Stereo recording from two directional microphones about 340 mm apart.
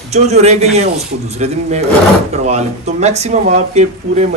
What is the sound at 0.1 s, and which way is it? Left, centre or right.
Speech, centre.